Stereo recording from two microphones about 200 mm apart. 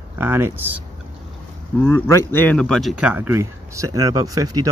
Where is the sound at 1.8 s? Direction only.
10° left (ahead or behind).